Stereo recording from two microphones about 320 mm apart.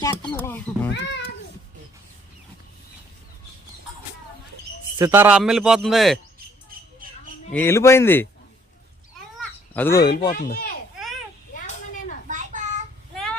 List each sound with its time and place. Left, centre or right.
0.0 s speech: centre
0.9 s a child's voice: left
4.9 s a man's voice: centre
7.5 s speech: centre
9.7 s speech: centre
10.3 s speech: left
11.5 s a sound: left
12.3 s a sound: right